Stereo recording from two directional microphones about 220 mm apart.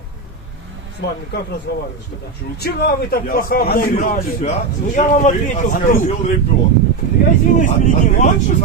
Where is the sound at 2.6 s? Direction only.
45° left (ahead or behind).